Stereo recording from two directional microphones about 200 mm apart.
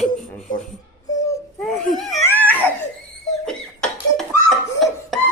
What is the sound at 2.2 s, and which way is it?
Laughter, 10° left (ahead or behind).